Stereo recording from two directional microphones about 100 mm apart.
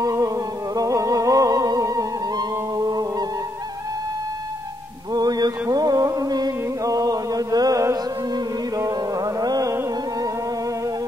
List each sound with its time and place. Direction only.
0.0 s music: 35° right (ahead or behind)
5.1 s mantra: 40° right (ahead or behind)
8.7 s music: 35° right (ahead or behind)